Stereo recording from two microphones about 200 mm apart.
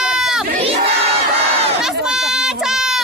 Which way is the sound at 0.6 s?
30° right (ahead or behind).